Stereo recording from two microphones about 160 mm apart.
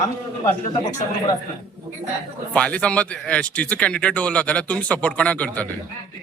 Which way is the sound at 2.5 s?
5° left (ahead or behind).